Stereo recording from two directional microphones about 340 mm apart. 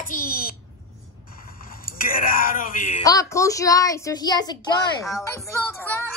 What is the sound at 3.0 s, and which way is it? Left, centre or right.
A child's voice, centre.